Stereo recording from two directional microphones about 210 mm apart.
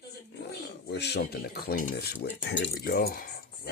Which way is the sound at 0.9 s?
55° left (ahead or behind).